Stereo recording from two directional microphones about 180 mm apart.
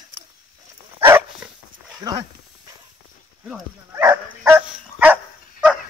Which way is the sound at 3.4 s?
10° right (ahead or behind).